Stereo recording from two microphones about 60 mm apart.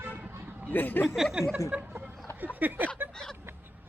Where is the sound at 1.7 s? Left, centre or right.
Right.